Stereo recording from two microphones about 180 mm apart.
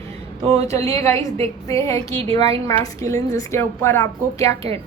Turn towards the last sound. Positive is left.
turn(degrees=15)  # may be behind; listen again after turning